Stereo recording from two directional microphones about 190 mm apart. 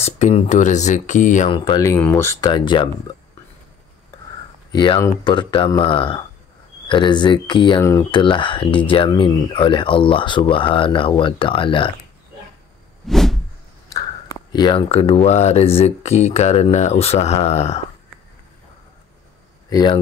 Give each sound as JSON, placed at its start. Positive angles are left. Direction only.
{"t": 0.0, "sound": "speech", "side_deg": 35}
{"t": 1.5, "sound": "speech", "side_deg": 25}
{"t": 1.8, "sound": "speech", "side_deg": 10}
{"t": 2.5, "sound": "speech", "side_deg": 25}
{"t": 4.7, "sound": "speech", "side_deg": 25}
{"t": 13.0, "sound": "a sound", "side_deg": 0}
{"t": 13.8, "sound": "speech", "side_deg": 20}
{"t": 19.7, "sound": "speech", "side_deg": 20}